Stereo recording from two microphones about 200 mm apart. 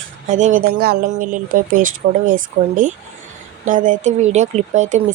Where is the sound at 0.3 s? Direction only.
40° right (ahead or behind).